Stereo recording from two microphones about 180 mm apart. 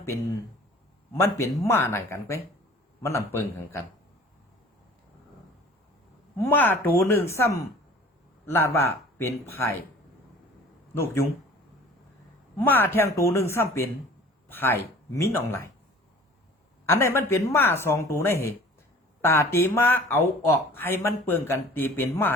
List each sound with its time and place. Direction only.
1.1 s speech: 15° left (ahead or behind)
6.4 s speech: 10° left (ahead or behind)
10.9 s speech: 15° left (ahead or behind)
12.5 s speech: 10° left (ahead or behind)
16.9 s speech: 15° left (ahead or behind)